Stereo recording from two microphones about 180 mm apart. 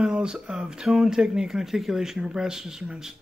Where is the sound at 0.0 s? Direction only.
5° right (ahead or behind).